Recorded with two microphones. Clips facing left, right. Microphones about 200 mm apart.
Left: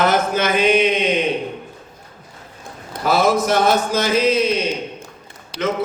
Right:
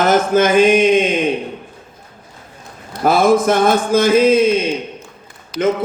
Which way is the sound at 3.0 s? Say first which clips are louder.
Right 4 dB; 50° right (ahead or behind).